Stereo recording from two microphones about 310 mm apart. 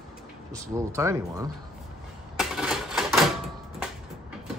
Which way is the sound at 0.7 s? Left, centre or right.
Centre.